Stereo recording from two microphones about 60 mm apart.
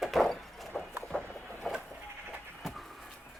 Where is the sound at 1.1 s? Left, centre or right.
Centre.